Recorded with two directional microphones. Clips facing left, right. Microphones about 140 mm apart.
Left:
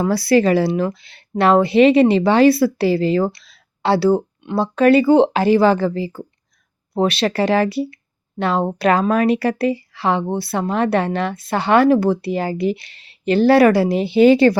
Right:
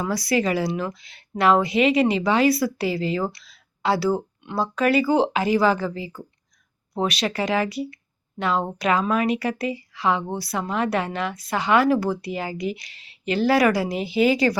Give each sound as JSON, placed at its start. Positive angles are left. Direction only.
{"t": 0.0, "sound": "speech", "side_deg": 30}